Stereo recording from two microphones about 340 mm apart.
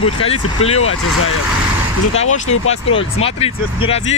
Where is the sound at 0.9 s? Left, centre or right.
Left.